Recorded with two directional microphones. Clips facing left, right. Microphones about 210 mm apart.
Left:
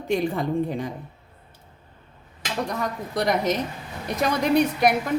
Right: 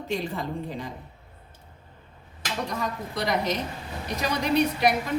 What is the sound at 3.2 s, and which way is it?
A woman's voice, 50° left (ahead or behind).